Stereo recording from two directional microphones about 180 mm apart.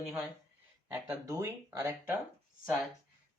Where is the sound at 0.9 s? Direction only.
15° right (ahead or behind).